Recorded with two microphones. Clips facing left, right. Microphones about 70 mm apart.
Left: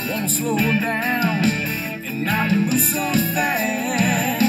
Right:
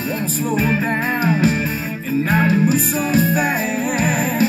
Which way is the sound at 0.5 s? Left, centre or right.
Right.